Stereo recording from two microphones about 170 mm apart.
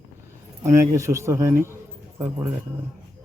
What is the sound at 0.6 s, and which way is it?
Speech, 15° right (ahead or behind).